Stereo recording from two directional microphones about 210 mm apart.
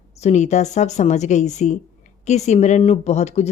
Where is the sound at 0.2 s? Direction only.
35° left (ahead or behind).